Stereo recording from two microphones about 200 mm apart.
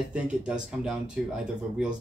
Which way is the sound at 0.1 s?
5° right (ahead or behind).